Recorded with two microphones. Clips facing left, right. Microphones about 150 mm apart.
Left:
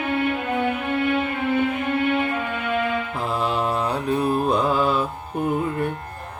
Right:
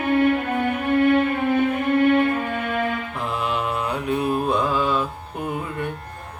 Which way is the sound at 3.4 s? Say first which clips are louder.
Left 2 dB; 35° left (ahead or behind).